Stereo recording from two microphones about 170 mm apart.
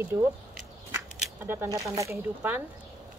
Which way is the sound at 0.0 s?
15° right (ahead or behind).